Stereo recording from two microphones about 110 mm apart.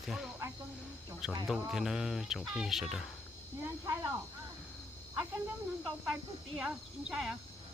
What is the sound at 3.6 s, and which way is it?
Speech, 25° right (ahead or behind).